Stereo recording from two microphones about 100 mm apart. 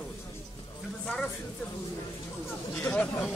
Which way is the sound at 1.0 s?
10° left (ahead or behind).